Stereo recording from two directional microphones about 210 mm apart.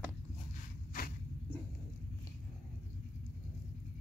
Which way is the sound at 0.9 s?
40° left (ahead or behind).